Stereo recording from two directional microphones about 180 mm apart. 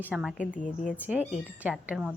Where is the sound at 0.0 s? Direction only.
5° right (ahead or behind).